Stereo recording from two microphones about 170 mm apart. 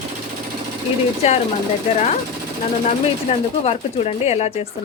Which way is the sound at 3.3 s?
40° left (ahead or behind).